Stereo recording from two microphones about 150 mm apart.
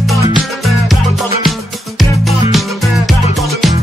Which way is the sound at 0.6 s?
Centre (ahead or behind).